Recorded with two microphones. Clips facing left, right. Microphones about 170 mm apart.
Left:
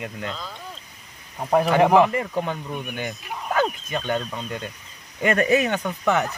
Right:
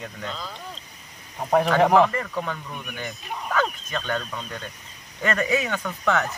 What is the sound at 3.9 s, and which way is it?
Speech, 15° left (ahead or behind).